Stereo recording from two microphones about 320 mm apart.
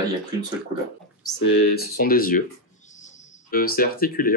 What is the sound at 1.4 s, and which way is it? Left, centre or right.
Speech, left.